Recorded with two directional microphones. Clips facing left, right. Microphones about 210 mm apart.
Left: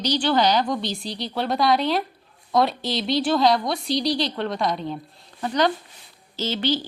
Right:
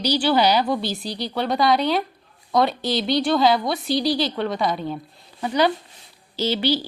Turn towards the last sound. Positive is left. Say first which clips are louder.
# right 3 dB
turn(degrees=-10)  # may be behind; listen again after turning